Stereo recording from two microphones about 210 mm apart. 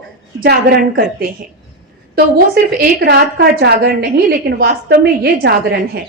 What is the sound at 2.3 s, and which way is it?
A woman's voice, 45° right (ahead or behind).